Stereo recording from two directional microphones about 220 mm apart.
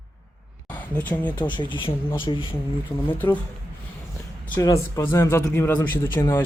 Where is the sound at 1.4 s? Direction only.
20° left (ahead or behind).